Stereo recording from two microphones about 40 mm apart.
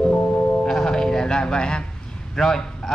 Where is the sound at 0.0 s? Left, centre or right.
Left.